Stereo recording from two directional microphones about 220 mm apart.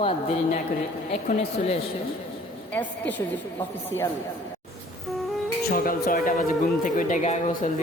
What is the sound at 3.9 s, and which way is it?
Speech, 65° left (ahead or behind).